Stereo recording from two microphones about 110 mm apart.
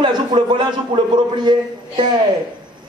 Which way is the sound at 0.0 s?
45° right (ahead or behind).